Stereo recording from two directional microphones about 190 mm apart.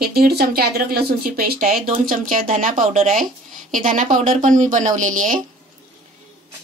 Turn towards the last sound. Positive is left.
turn(degrees=-45)  # may be behind; listen again after turning